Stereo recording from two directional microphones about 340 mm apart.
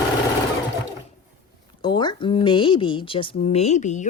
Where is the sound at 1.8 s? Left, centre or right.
Centre.